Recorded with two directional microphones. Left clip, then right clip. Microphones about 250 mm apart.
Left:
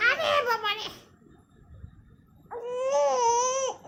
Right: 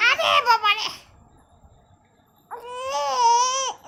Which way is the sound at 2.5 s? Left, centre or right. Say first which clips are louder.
Left 1 dB; centre.